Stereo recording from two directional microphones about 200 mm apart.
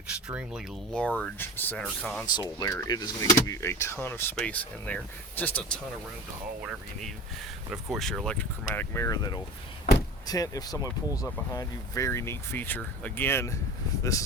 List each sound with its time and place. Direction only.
0.3 s speech: 5° right (ahead or behind)
0.9 s speech: 5° left (ahead or behind)
2.2 s speech: 20° left (ahead or behind)
6.6 s speech: 5° right (ahead or behind); by 14.3 s 15° left (ahead or behind)